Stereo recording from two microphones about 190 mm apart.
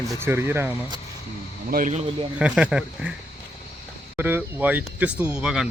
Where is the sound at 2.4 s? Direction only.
5° right (ahead or behind).